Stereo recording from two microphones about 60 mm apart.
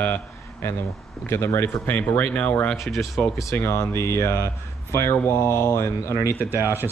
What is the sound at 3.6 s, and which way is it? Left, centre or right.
Speech, left.